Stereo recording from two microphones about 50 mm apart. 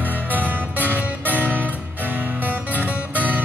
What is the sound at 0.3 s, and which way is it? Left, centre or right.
Music, right.